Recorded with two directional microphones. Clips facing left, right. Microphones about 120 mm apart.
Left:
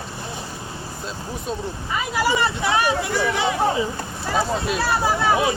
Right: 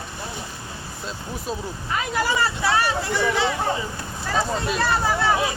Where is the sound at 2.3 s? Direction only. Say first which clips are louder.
Left 1 dB; 20° left (ahead or behind).